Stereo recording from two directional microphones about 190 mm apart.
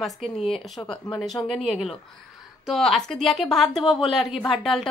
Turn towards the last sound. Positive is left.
turn(degrees=0)  # may be behind; listen again after turning